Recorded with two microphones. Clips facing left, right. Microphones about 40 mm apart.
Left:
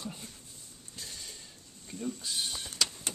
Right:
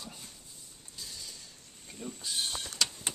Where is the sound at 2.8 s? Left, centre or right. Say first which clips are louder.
Even; centre.